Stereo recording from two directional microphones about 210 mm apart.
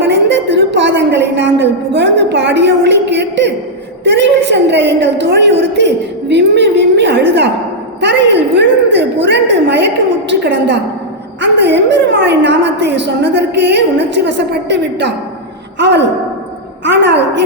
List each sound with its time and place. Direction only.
0.1 s a woman's voice: 55° right (ahead or behind)
14.3 s a woman's voice: 55° right (ahead or behind)